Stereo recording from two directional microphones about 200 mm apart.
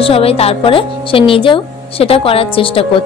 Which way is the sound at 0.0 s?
30° left (ahead or behind).